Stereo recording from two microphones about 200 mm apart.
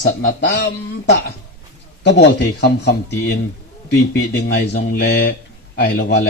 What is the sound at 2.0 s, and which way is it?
Speech, 60° left (ahead or behind).